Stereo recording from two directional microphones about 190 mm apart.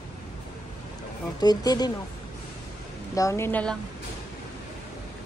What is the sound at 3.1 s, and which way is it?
Speech, 15° left (ahead or behind).